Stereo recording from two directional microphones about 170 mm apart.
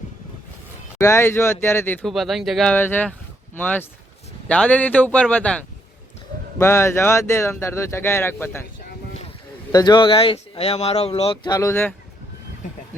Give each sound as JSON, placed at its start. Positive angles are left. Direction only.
{"t": 0.9, "sound": "speech", "side_deg": 15}
{"t": 2.1, "sound": "speech", "side_deg": 0}
{"t": 2.7, "sound": "speech", "side_deg": 10}
{"t": 9.7, "sound": "speech", "side_deg": 25}
{"t": 11.4, "sound": "speech", "side_deg": 20}